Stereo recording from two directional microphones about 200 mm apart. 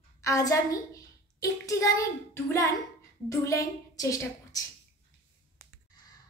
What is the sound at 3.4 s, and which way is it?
A woman's voice, 15° left (ahead or behind).